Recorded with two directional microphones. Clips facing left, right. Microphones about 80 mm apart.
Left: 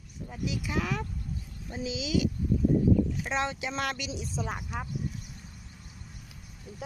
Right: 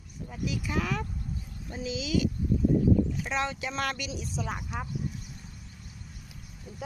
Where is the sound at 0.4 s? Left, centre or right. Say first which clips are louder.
Even; left.